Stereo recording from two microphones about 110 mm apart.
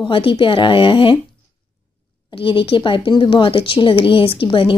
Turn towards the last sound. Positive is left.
turn(degrees=50)  # may be behind; listen again after turning